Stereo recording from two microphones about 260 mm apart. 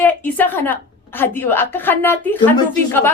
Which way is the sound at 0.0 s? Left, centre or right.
Centre.